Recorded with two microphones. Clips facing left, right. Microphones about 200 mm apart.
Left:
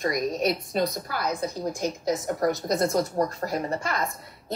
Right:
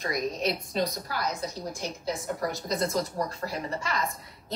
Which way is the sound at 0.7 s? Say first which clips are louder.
Left 3 dB; 55° left (ahead or behind).